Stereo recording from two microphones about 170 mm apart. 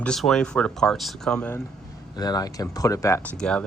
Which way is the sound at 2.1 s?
25° left (ahead or behind).